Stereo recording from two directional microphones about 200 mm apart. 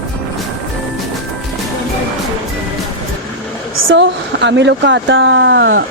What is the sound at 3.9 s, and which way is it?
Speech, 60° right (ahead or behind).